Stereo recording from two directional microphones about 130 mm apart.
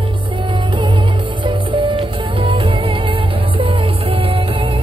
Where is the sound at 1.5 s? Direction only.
40° right (ahead or behind).